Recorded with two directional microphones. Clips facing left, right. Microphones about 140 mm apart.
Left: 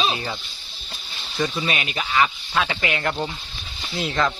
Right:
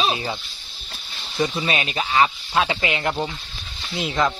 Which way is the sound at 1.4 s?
25° right (ahead or behind).